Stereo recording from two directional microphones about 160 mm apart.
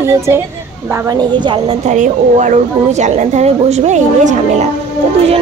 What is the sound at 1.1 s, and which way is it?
Speech, 30° right (ahead or behind).